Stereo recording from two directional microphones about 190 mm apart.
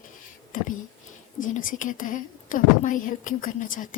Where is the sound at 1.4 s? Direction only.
45° left (ahead or behind).